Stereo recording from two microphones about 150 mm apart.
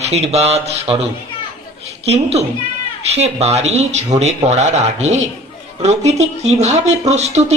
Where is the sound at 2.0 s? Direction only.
45° right (ahead or behind).